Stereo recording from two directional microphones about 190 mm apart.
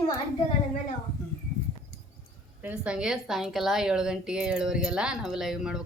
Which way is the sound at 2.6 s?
5° right (ahead or behind).